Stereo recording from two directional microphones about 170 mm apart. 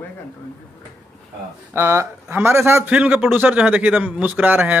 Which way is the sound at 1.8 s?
15° right (ahead or behind).